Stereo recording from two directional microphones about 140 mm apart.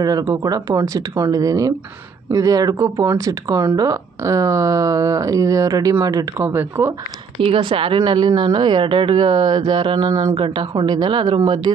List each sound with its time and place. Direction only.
0.0 s speech: 25° right (ahead or behind)
7.4 s speech: 40° right (ahead or behind)